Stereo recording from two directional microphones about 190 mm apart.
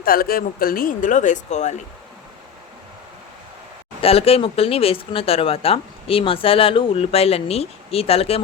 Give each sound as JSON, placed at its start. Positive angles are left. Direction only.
{"t": 0.0, "sound": "speech", "side_deg": 50}
{"t": 4.0, "sound": "speech", "side_deg": 30}